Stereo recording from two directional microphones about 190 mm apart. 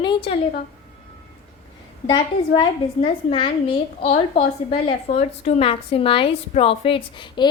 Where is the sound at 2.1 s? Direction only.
25° left (ahead or behind).